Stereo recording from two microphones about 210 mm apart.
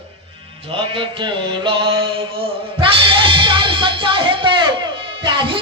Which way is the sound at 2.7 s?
25° right (ahead or behind).